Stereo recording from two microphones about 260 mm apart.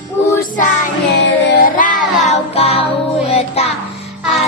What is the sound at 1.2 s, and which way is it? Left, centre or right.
Music, left.